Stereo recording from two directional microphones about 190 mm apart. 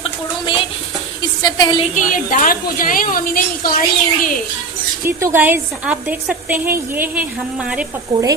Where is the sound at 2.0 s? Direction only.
45° left (ahead or behind).